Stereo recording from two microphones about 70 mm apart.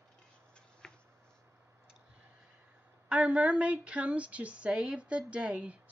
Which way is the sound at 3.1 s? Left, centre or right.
Centre.